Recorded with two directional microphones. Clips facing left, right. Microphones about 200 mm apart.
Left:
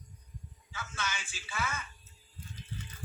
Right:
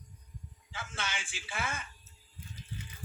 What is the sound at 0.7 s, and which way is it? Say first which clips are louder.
Speech: even; 30° right (ahead or behind).